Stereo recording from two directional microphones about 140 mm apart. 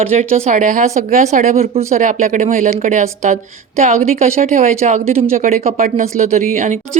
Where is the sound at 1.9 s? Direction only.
65° right (ahead or behind); by 5.4 s 45° right (ahead or behind).